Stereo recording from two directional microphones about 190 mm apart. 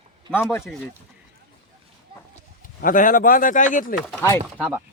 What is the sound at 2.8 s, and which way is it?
Speech, 45° left (ahead or behind).